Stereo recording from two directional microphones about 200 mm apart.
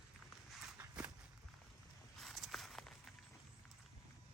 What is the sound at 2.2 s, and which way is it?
Walk, centre (ahead or behind).